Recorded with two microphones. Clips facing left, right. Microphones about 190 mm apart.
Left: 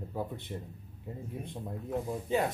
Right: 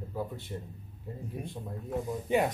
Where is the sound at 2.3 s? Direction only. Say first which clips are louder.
Right 3 dB; 15° right (ahead or behind).